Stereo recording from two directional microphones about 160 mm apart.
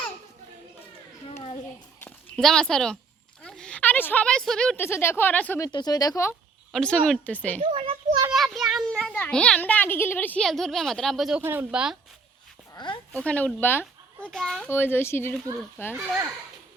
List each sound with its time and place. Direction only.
2.3 s a woman's voice: centre (ahead or behind)
4.9 s a child's voice: 15° left (ahead or behind)
5.6 s speech: 25° left (ahead or behind)
6.7 s speech: 5° left (ahead or behind)
7.6 s children playing: 30° right (ahead or behind)
8.3 s a child's voice: centre (ahead or behind)
12.7 s a sound: 30° left (ahead or behind)
13.1 s a child's voice: 10° left (ahead or behind)